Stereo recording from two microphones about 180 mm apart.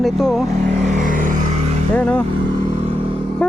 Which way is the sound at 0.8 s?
45° right (ahead or behind).